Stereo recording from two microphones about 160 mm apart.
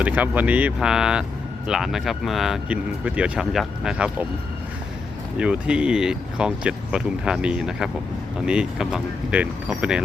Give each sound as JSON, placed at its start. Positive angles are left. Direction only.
{"t": 0.0, "sound": "speech", "side_deg": -10}
{"t": 5.4, "sound": "speech", "side_deg": -5}